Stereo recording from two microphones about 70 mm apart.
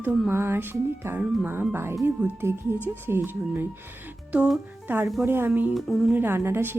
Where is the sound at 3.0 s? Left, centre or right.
Right.